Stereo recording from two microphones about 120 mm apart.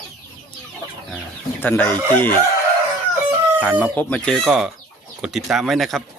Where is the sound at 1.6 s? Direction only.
15° left (ahead or behind).